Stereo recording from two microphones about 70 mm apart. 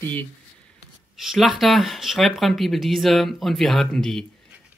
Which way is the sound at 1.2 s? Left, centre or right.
Centre.